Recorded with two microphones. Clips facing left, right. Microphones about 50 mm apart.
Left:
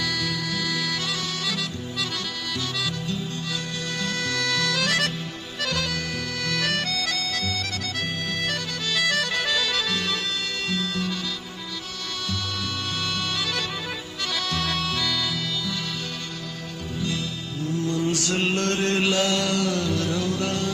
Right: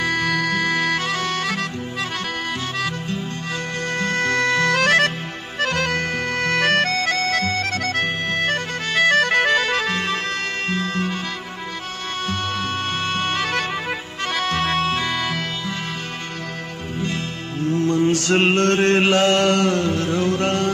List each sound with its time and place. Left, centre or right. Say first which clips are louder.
0.0 s music: right 7 dB; right
4.0 s music: right 7 dB; right
13.0 s music: right 5 dB; right
17.0 s music: right 3 dB; right